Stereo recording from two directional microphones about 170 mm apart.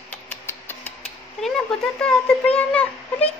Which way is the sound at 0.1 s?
10° left (ahead or behind).